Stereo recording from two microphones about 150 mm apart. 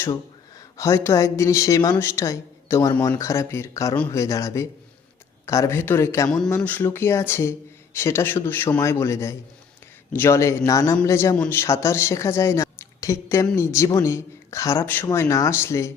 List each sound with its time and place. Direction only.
0.8 s speech: 20° left (ahead or behind)
3.9 s a man's voice: 10° left (ahead or behind)
4.2 s a man's voice: 20° left (ahead or behind)